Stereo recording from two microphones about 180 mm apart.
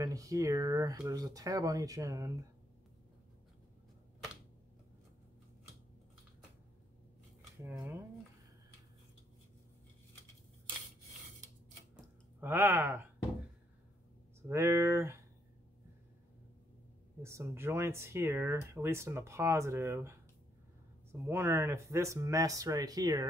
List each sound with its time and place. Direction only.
0.0 s speech: 20° right (ahead or behind)
7.6 s speech: 10° right (ahead or behind)
12.4 s speech: 15° right (ahead or behind)
14.5 s speech: 15° right (ahead or behind)
17.2 s speech: 15° right (ahead or behind)